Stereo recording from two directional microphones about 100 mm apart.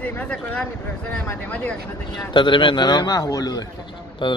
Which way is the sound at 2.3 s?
55° left (ahead or behind).